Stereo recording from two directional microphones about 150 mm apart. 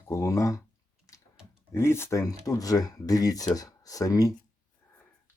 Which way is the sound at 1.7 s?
15° left (ahead or behind).